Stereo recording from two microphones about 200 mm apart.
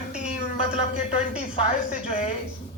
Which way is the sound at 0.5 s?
30° left (ahead or behind).